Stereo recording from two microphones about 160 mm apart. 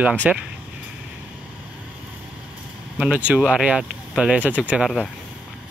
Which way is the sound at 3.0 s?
5° right (ahead or behind).